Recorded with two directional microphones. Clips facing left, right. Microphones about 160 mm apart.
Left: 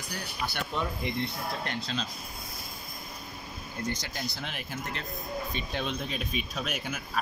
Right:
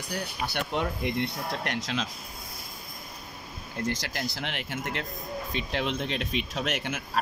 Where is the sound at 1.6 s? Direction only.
85° right.